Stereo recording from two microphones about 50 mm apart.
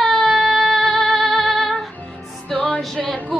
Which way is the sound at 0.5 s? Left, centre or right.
Centre.